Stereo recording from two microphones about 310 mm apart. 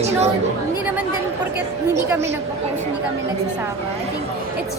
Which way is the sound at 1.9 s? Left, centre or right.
Centre.